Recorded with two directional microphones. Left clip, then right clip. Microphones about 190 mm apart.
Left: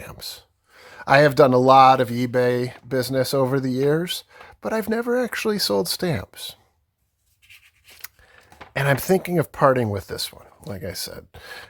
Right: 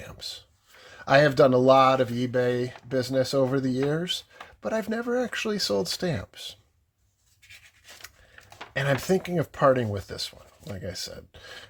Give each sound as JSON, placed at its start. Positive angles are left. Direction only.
{"t": 0.0, "sound": "speech", "side_deg": 40}
{"t": 8.7, "sound": "speech", "side_deg": 40}